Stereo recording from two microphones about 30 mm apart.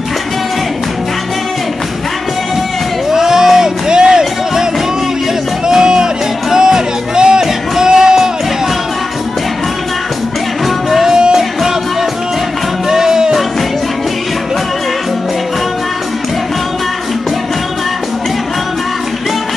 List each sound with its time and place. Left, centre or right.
3.1 s a sound: centre
5.7 s music: right
11.1 s music: right
12.9 s music: centre